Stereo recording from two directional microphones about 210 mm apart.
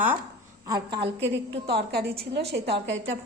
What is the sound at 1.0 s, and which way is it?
A woman's voice, 60° right (ahead or behind).